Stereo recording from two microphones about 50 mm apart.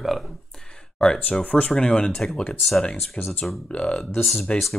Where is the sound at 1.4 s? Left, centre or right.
Left.